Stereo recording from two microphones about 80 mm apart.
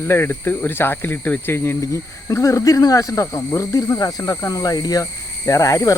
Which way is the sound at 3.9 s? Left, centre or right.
Left.